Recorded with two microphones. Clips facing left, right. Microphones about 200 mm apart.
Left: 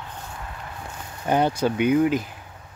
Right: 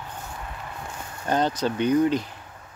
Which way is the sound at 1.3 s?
10° left (ahead or behind).